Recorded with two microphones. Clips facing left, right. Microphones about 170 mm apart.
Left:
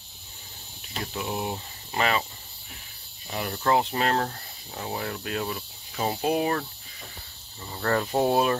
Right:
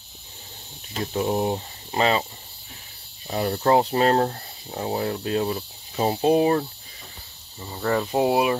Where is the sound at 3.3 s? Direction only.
35° right (ahead or behind).